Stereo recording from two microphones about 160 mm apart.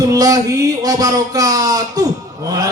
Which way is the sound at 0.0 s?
20° right (ahead or behind).